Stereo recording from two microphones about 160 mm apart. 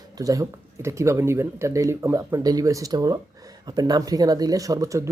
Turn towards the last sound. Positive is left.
turn(degrees=-20)  # may be behind; listen again after turning